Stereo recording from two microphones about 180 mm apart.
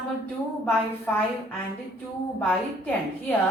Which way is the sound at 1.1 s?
10° left (ahead or behind).